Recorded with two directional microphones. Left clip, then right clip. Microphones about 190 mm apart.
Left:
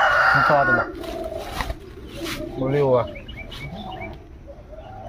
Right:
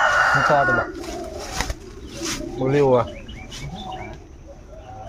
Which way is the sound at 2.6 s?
60° right (ahead or behind).